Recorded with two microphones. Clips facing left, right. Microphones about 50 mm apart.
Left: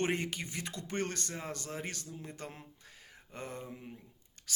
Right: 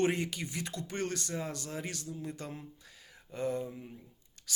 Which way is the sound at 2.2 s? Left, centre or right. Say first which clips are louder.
Right 4 dB; left.